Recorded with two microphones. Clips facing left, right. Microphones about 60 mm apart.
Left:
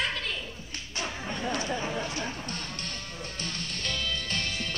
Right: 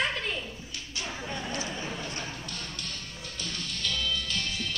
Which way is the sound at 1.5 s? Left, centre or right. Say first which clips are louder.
Left 4 dB; left.